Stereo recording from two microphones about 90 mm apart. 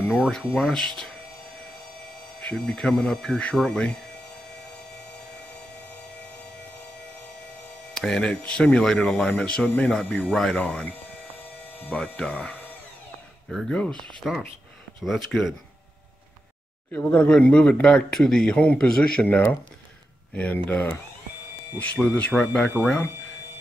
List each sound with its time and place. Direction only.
0.1 s speech: centre (ahead or behind)
2.4 s speech: 5° left (ahead or behind)
7.9 s speech: 5° left (ahead or behind)
11.9 s speech: 5° left (ahead or behind)
16.9 s speech: 20° left (ahead or behind)